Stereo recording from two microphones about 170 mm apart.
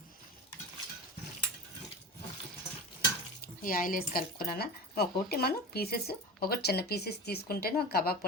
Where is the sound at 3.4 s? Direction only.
55° left (ahead or behind).